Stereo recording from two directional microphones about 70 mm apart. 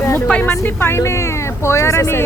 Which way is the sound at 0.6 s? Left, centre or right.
Left.